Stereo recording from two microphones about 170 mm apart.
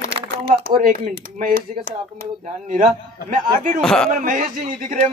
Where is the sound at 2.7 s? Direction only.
50° right (ahead or behind).